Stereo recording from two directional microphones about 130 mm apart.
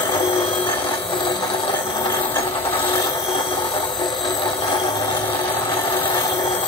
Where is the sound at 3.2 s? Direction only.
40° left (ahead or behind).